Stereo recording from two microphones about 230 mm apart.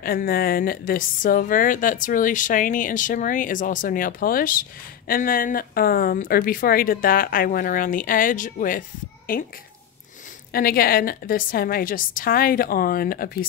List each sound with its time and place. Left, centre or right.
0.0 s a woman's voice: left
10.5 s a woman's voice: left